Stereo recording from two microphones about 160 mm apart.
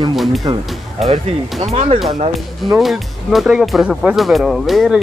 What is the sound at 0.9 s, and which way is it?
Speech, 40° right (ahead or behind).